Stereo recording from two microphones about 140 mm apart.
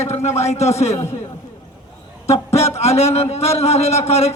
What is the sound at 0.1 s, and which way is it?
Speech, 50° left (ahead or behind).